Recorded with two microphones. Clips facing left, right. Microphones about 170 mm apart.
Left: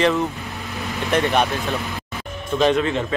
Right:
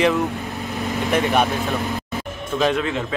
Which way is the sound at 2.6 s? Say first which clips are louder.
Left 2 dB; 5° right (ahead or behind).